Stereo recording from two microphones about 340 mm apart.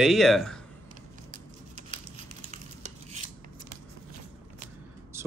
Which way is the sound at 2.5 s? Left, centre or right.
Centre.